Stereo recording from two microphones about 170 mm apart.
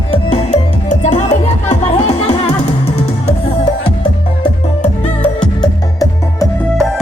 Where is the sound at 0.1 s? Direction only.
35° left (ahead or behind).